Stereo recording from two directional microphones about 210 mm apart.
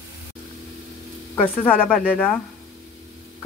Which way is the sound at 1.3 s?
5° left (ahead or behind).